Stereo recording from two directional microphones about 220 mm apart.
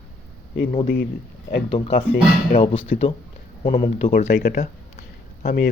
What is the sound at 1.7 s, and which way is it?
Speech, 25° left (ahead or behind).